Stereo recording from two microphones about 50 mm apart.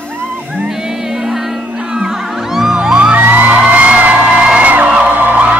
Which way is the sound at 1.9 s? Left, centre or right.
Centre.